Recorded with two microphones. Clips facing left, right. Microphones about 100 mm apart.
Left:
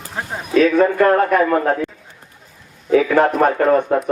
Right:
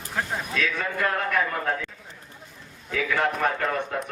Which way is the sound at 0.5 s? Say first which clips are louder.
Left 16 dB; 50° left (ahead or behind).